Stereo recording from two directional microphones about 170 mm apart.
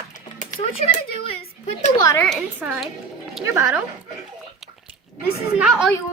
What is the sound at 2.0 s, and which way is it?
Speech, 20° left (ahead or behind).